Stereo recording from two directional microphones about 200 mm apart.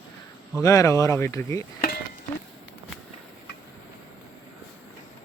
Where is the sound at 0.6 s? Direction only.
15° left (ahead or behind).